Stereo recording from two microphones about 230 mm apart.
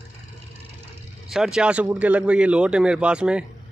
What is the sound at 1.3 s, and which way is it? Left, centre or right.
Speech, centre.